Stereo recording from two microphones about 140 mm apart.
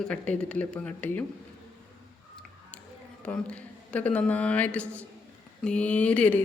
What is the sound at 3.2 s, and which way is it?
Speech, 10° left (ahead or behind).